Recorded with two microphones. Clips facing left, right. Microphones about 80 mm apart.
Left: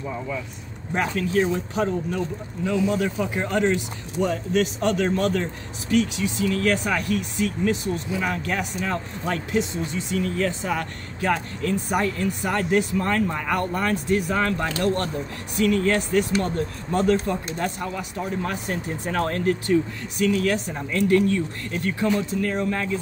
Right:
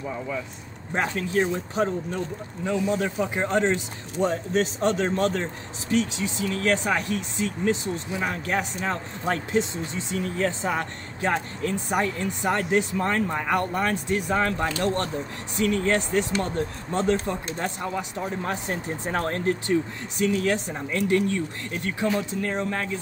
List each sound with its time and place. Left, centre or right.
0.9 s speech: right
22.4 s speech: centre